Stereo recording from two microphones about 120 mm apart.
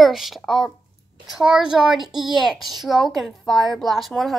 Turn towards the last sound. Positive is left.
turn(degrees=0)  # may be behind; listen again after turning